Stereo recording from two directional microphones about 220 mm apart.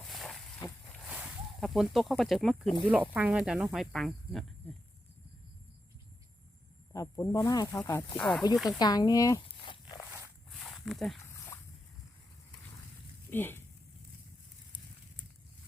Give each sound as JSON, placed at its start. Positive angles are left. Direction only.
{"t": 0.0, "sound": "a sound", "side_deg": 0}
{"t": 0.9, "sound": "speech", "side_deg": 0}
{"t": 6.9, "sound": "speech", "side_deg": 15}
{"t": 8.8, "sound": "speech", "side_deg": 15}
{"t": 10.6, "sound": "a sound", "side_deg": 0}
{"t": 11.2, "sound": "dog", "side_deg": 10}
{"t": 13.3, "sound": "speech", "side_deg": 10}